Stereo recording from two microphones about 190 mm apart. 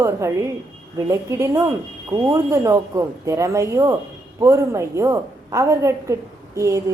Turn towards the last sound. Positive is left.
turn(degrees=-15)  # may be behind; listen again after turning